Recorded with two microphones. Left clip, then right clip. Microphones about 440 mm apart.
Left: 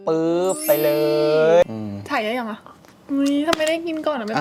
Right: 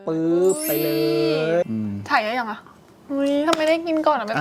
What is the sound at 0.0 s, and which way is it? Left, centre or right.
Music, left.